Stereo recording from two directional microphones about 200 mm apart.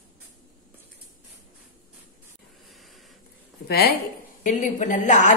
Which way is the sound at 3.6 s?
50° left (ahead or behind).